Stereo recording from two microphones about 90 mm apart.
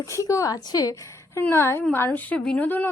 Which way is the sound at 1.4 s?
25° left (ahead or behind).